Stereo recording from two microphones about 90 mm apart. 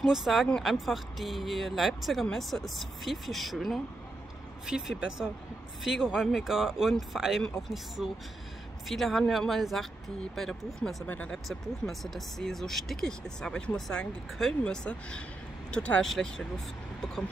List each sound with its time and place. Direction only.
0.0 s speech: 5° right (ahead or behind)
11.1 s speech: 15° left (ahead or behind)
11.3 s speech: centre (ahead or behind)